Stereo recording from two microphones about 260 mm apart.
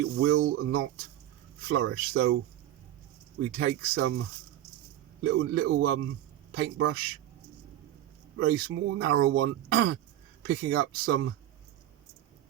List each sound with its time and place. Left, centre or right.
0.0 s speech: right
3.6 s speech: right
5.4 s speech: right
8.4 s speech: right